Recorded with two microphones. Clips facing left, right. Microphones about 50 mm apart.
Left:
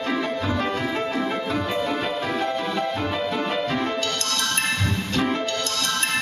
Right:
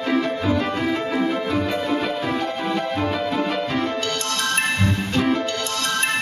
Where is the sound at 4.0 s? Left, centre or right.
Centre.